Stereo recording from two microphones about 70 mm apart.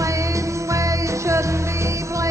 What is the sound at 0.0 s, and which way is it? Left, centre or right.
Music, right.